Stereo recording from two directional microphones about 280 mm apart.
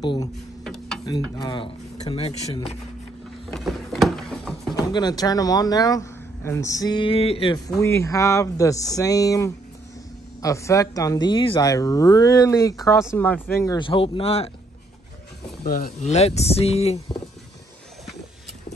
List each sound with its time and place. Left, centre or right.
0.0 s speech: centre
0.7 s mechanisms: centre
1.0 s speech: centre
3.5 s a sound: centre
4.9 s speech: centre
15.6 s speech: left